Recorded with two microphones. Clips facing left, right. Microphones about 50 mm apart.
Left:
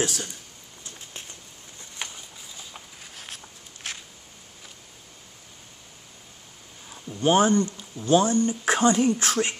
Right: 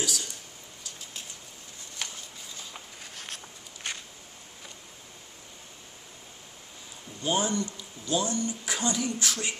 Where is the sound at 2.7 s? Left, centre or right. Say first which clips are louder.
Even; centre.